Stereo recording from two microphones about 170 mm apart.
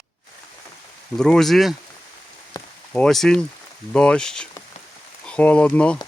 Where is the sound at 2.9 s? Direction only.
Centre (ahead or behind).